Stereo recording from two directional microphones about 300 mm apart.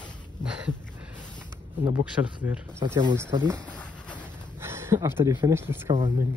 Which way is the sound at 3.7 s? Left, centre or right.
Centre.